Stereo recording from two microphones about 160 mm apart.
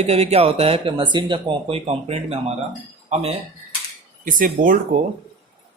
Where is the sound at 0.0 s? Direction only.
40° right (ahead or behind).